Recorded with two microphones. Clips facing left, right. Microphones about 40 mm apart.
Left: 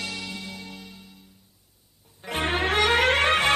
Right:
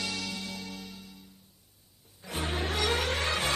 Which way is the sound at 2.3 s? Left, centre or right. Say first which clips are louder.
Left 8 dB; left.